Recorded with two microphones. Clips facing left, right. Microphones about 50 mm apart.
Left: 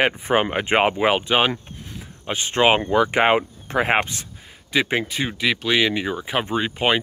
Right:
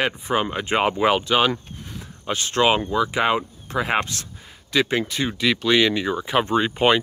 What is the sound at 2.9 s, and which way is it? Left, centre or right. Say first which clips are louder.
Speech: left 3 dB; left.